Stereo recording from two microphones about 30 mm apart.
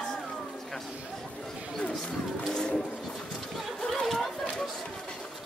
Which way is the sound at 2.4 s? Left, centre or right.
Left.